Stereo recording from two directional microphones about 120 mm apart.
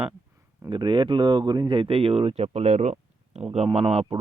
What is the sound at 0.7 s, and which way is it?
Speech, 40° right (ahead or behind).